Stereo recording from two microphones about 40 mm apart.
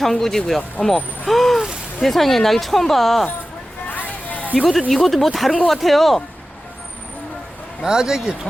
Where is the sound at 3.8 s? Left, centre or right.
Left.